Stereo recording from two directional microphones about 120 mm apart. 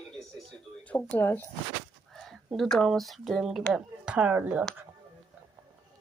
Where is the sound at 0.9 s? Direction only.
10° left (ahead or behind).